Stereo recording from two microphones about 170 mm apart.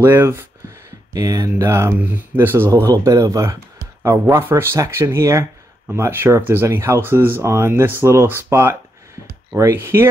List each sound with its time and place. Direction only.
0.0 s speech: 15° right (ahead or behind)